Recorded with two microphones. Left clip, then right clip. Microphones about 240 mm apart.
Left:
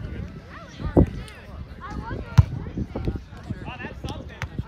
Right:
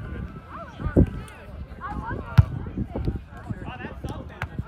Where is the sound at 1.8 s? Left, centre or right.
Centre.